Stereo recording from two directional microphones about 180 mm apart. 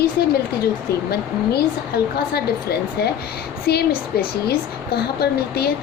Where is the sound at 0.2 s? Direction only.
60° left (ahead or behind).